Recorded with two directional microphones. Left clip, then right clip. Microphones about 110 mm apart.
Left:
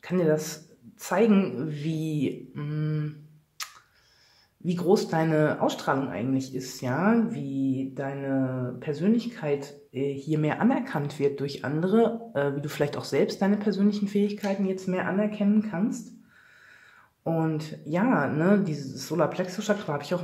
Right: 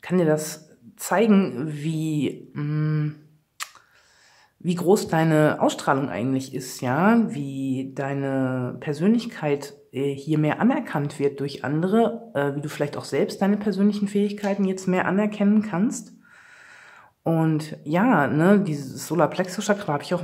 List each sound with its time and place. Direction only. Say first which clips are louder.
0.0 s speech: right 3 dB; 30° right (ahead or behind)
3.6 s a sound: right 3 dB; 30° right (ahead or behind)
4.6 s speech: right 3 dB; 35° right (ahead or behind)
7.1 s speech: right 4 dB; 50° right (ahead or behind)
17.2 s speech: right 4 dB; 40° right (ahead or behind)